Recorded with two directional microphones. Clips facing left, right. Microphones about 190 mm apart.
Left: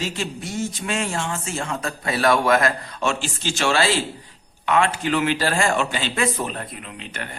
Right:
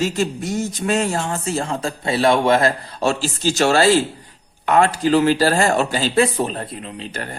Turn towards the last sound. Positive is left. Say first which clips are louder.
# right 5 dB
turn(degrees=-35)  # may be behind; listen again after turning